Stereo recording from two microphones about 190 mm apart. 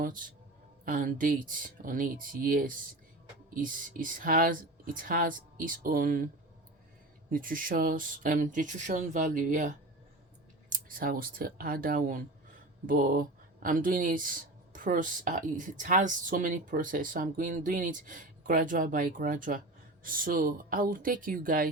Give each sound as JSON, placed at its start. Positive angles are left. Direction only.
{"t": 0.9, "sound": "speech", "side_deg": -45}